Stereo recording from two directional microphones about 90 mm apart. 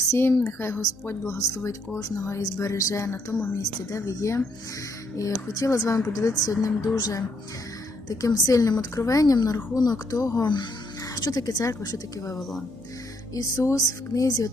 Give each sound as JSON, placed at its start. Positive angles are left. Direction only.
{"t": 0.1, "sound": "speech", "side_deg": 25}
{"t": 12.4, "sound": "speech", "side_deg": 0}
{"t": 13.3, "sound": "speech", "side_deg": 40}